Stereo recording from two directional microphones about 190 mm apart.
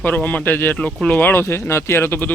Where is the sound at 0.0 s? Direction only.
10° left (ahead or behind).